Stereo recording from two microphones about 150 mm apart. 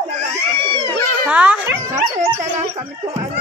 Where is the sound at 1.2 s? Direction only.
10° right (ahead or behind).